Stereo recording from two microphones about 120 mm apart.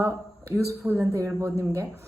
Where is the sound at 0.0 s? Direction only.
20° right (ahead or behind).